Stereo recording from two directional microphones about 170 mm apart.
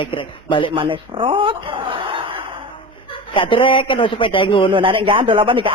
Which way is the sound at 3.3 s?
30° left (ahead or behind).